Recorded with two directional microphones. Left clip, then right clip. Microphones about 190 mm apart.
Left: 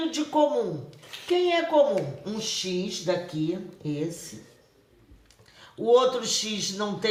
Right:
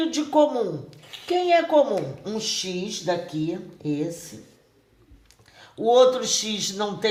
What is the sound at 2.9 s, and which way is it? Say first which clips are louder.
Speech: right 2 dB; 45° right (ahead or behind).